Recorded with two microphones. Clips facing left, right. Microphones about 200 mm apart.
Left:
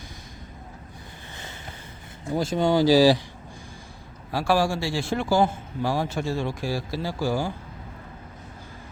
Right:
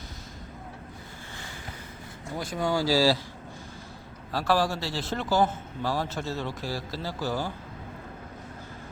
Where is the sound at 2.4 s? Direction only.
25° left (ahead or behind).